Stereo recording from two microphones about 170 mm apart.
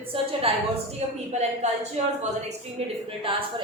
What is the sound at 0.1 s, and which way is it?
A woman's voice, 30° right (ahead or behind).